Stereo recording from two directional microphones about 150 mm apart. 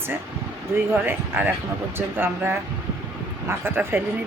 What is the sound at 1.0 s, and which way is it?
Speech, 15° right (ahead or behind).